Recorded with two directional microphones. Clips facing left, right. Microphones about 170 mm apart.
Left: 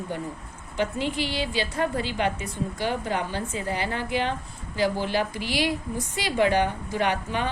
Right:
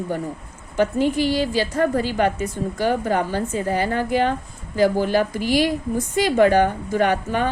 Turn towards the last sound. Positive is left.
turn(degrees=-45)  # may be behind; listen again after turning